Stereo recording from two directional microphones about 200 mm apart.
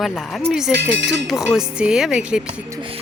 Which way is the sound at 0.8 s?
60° right (ahead or behind).